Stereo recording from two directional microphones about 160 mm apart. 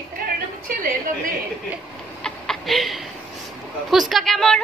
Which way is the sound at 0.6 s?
65° right (ahead or behind).